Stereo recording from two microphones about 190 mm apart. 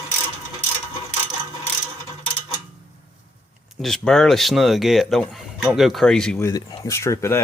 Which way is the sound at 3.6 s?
Centre (ahead or behind).